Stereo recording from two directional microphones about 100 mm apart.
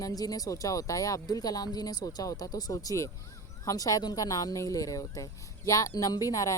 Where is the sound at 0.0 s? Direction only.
40° left (ahead or behind).